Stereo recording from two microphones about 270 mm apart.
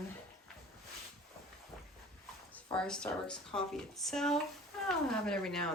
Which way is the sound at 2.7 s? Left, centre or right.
Centre.